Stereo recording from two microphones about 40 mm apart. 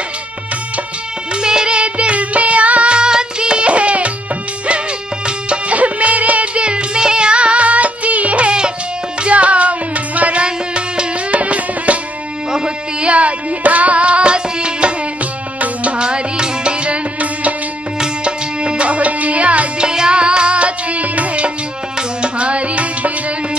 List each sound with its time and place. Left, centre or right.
1.3 s music: right
1.8 s music: right
5.8 s music: right
10.4 s music: right
11.3 s music: right
12.4 s music: right
15.6 s music: right
16.0 s music: right
17.9 s music: right
19.8 s music: centre